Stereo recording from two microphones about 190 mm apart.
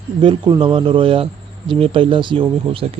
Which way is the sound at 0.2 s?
25° right (ahead or behind).